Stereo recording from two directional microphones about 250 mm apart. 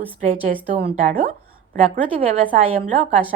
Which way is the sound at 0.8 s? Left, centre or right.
Right.